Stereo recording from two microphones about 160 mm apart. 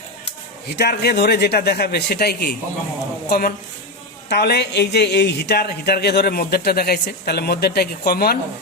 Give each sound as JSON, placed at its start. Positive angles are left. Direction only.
{"t": 0.8, "sound": "a man's voice", "side_deg": 90}
{"t": 4.3, "sound": "speech", "side_deg": 90}